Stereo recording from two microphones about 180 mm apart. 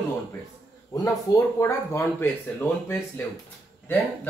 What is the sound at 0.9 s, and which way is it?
Speech, 15° left (ahead or behind).